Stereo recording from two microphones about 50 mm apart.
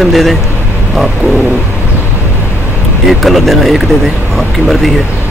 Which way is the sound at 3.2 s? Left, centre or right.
Centre.